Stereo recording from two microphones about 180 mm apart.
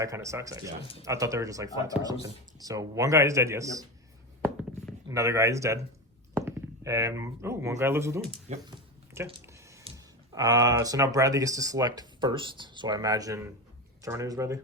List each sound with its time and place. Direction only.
0.0 s speech: 15° right (ahead or behind)
5.0 s speech: 15° right (ahead or behind)
9.9 s a sound: 30° right (ahead or behind)
10.3 s speech: 20° right (ahead or behind)